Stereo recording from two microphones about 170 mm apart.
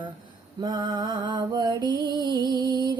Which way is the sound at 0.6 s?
25° right (ahead or behind).